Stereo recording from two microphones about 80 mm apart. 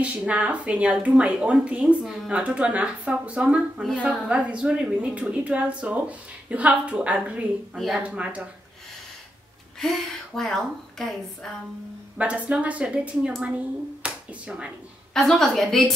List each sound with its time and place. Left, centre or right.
0.0 s speech: centre
7.7 s a woman's voice: centre
8.0 s speech: centre
9.8 s a woman's voice: centre
12.2 s speech: centre
14.0 s finger snapping: centre
15.1 s a woman's voice: centre